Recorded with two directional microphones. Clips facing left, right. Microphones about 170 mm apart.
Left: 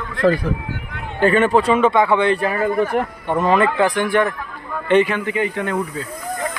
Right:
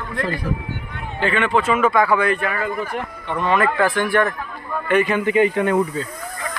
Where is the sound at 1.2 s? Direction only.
40° left (ahead or behind).